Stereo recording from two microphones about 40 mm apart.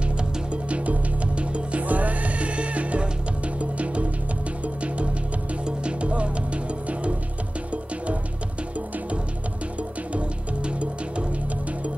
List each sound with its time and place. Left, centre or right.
0.0 s music: right
9.8 s music: right